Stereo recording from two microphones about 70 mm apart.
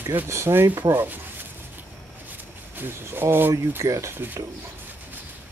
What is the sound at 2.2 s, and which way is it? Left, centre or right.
Speech, right.